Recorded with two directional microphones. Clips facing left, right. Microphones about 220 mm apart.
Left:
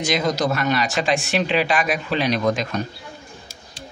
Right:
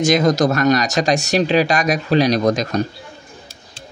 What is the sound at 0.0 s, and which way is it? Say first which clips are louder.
Speech: right 7 dB; 45° right (ahead or behind).